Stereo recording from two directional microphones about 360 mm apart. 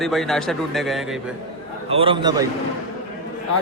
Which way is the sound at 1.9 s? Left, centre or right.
Centre.